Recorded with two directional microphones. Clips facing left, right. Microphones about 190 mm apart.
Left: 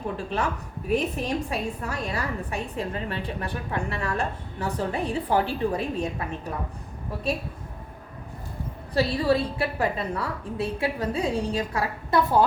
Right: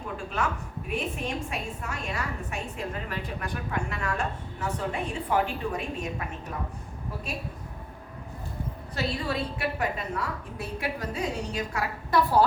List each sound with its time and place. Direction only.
0.9 s a woman's voice: 35° left (ahead or behind)
9.0 s a woman's voice: 30° left (ahead or behind)